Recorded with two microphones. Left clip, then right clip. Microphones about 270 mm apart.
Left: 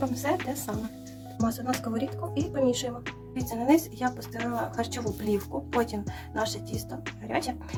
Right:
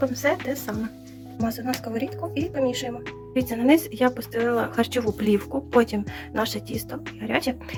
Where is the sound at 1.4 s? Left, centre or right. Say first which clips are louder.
Right 2 dB; centre.